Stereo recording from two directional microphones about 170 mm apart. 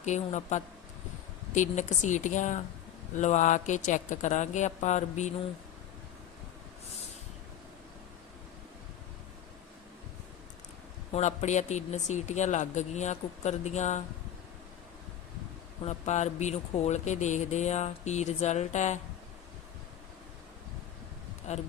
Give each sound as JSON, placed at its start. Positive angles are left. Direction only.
{"t": 0.0, "sound": "speech", "side_deg": 45}
{"t": 11.1, "sound": "speech", "side_deg": 40}
{"t": 15.8, "sound": "speech", "side_deg": 40}
{"t": 21.5, "sound": "speech", "side_deg": 45}